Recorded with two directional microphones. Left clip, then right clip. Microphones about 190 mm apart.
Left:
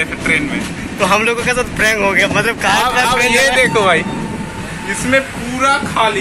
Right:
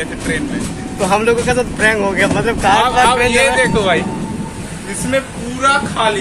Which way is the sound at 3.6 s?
20° left (ahead or behind).